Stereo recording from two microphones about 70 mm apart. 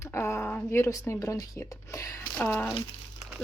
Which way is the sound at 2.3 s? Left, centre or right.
Left.